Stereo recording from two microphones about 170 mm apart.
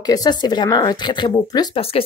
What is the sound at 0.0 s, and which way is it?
Speech, 25° left (ahead or behind).